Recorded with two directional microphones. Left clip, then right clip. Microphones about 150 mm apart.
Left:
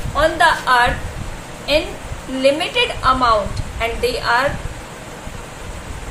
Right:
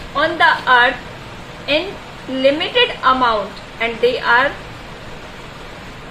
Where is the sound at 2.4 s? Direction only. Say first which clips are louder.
Right 2 dB; 40° right (ahead or behind).